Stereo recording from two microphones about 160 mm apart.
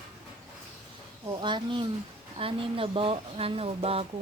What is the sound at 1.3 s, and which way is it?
A woman's voice, 30° right (ahead or behind).